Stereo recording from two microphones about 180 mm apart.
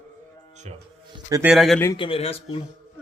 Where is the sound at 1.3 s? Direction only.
10° right (ahead or behind).